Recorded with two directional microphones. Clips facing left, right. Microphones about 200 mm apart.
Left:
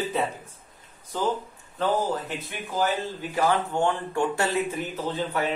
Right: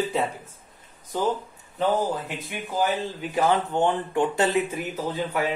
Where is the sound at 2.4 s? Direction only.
10° right (ahead or behind).